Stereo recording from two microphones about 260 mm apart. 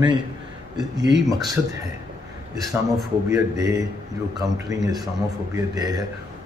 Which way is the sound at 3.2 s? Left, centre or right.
Centre.